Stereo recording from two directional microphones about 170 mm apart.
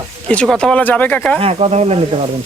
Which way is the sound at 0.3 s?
5° left (ahead or behind).